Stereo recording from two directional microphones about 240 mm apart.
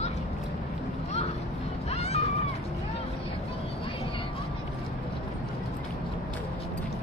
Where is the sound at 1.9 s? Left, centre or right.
Left.